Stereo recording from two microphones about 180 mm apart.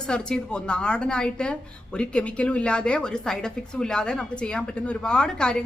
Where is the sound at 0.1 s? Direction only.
5° left (ahead or behind).